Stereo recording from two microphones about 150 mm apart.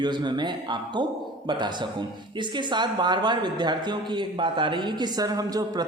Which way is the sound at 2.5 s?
30° right (ahead or behind).